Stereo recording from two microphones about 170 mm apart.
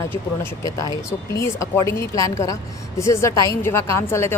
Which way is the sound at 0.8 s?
20° left (ahead or behind).